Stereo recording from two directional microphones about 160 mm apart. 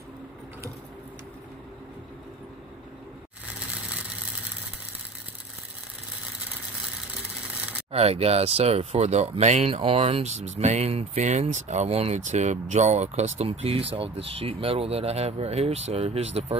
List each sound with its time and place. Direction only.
3.5 s vehicle: 5° right (ahead or behind)
7.9 s speech: 40° right (ahead or behind)